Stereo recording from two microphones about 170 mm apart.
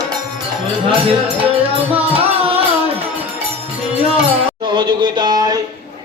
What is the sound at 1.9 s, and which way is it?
Music, 35° right (ahead or behind).